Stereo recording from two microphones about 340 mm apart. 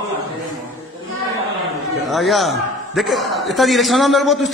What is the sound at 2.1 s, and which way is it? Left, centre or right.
A man's voice, centre.